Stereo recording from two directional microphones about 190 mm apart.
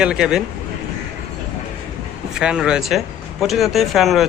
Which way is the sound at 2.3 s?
5° right (ahead or behind).